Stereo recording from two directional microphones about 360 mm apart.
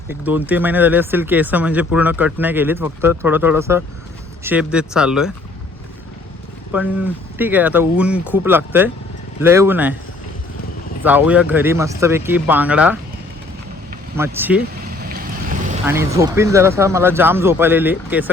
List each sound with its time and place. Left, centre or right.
0.1 s speech: centre
6.7 s speech: centre
11.0 s speech: centre
14.2 s speech: centre
14.8 s boat: right
15.9 s speech: centre